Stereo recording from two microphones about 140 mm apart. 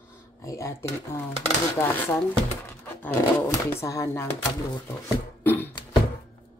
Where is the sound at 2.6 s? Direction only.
15° left (ahead or behind).